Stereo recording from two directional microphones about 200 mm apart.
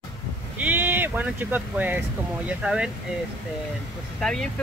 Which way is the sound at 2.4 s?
5° right (ahead or behind).